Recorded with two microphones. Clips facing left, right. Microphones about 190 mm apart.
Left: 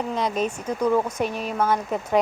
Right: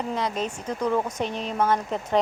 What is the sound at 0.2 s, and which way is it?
A woman's voice, 15° left (ahead or behind).